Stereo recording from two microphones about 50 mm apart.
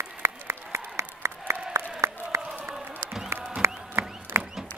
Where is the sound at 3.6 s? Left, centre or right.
Right.